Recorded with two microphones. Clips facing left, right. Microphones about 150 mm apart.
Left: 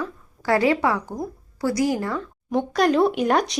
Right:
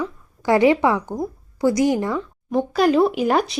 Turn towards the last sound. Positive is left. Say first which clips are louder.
# right 1 dB
turn(degrees=0)  # may be behind; listen again after turning